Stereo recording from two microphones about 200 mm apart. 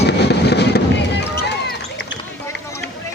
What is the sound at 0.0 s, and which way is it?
Fireworks, 55° left (ahead or behind).